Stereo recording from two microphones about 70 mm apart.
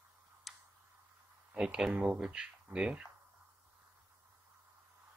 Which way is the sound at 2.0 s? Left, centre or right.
Centre.